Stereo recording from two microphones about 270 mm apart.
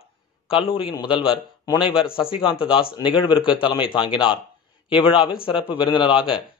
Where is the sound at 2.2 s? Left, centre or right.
Centre.